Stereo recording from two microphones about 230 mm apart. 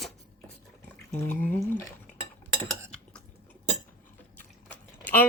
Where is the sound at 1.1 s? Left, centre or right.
Centre.